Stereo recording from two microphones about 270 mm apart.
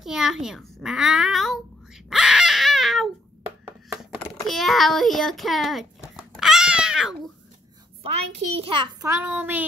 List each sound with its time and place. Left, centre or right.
0.0 s a child's voice: centre
2.0 s baby cry: centre
4.5 s a sound: centre
8.0 s a child's voice: right
9.2 s child singing: centre